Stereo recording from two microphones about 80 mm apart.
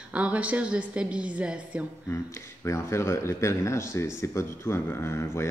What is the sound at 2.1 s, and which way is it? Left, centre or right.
A man's voice, left.